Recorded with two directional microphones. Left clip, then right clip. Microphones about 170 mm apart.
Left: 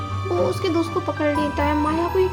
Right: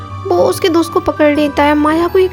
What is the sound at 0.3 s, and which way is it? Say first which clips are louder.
Speech: right 11 dB; 50° right (ahead or behind).